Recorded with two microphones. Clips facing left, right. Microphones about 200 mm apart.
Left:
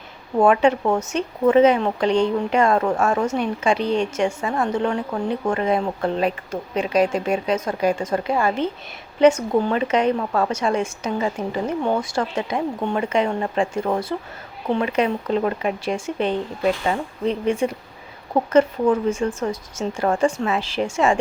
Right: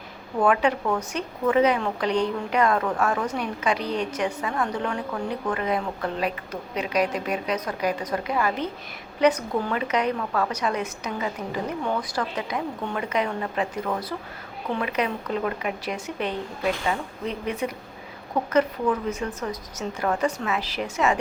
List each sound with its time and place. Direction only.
0.4 s speech: 25° left (ahead or behind)
19.5 s speech: 30° left (ahead or behind)